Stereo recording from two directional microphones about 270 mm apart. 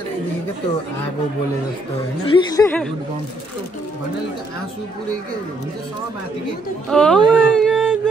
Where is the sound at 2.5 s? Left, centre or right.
Centre.